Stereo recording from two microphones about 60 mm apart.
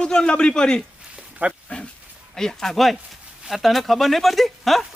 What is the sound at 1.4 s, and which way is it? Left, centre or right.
Speech, right.